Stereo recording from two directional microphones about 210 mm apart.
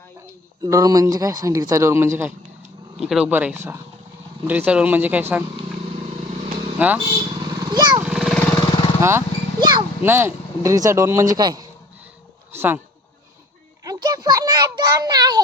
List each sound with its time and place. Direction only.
0.6 s speech: 15° right (ahead or behind)
6.7 s speech: 5° right (ahead or behind)
7.1 s vehicle: 20° right (ahead or behind)
8.0 s vehicle: centre (ahead or behind)
9.0 s speech: 10° right (ahead or behind)
12.5 s a sound: 10° right (ahead or behind)
13.8 s a sound: 15° right (ahead or behind)